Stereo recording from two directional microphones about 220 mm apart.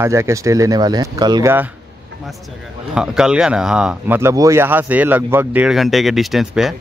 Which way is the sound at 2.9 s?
5° right (ahead or behind).